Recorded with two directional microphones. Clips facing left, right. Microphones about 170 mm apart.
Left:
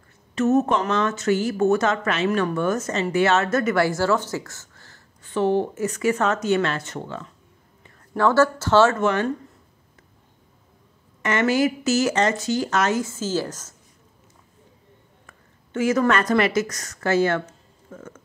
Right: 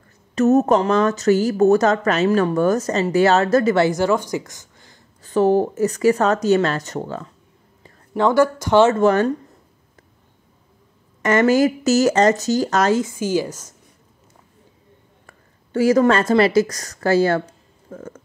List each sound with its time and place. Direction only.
0.3 s speech: 40° right (ahead or behind); by 5.0 s 15° right (ahead or behind)
5.2 s speech: 40° right (ahead or behind)
8.2 s a woman's voice: 15° right (ahead or behind)
9.0 s speech: 40° right (ahead or behind)
11.2 s speech: 40° right (ahead or behind)
13.0 s a woman's voice: 15° right (ahead or behind)
15.2 s a woman's voice: 35° right (ahead or behind)